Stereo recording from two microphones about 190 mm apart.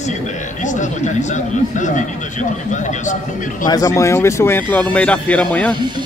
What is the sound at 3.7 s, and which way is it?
Speech, 20° left (ahead or behind).